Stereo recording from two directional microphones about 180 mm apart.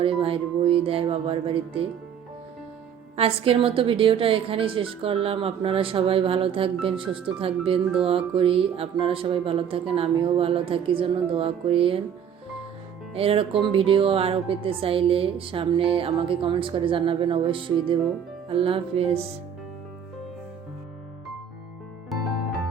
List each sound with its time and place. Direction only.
0.0 s speech: 30° right (ahead or behind)
3.2 s speech: 30° right (ahead or behind)
13.1 s speech: 30° right (ahead or behind)
22.1 s music: centre (ahead or behind)